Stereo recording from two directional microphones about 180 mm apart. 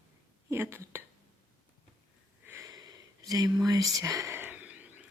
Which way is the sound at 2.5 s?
15° right (ahead or behind).